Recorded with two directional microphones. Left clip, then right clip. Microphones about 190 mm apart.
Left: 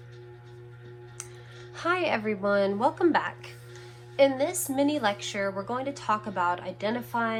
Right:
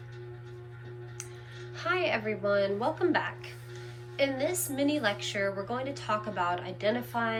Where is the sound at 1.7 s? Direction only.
20° left (ahead or behind).